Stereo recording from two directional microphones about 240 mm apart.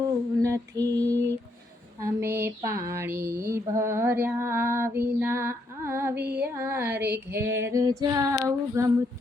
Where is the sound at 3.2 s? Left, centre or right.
Right.